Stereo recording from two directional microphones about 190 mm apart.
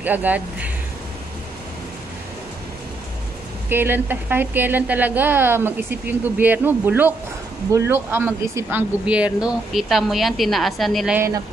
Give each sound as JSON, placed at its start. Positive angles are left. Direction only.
{"t": 0.0, "sound": "a woman's voice", "side_deg": -10}
{"t": 3.6, "sound": "a woman's voice", "side_deg": -10}
{"t": 11.1, "sound": "a woman's voice", "side_deg": -15}